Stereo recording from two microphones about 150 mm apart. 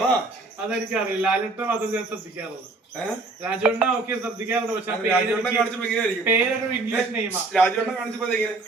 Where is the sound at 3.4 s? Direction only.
10° right (ahead or behind).